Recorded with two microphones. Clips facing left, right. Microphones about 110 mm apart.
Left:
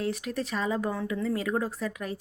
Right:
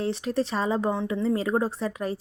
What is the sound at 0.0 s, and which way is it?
A woman's voice, 30° right (ahead or behind).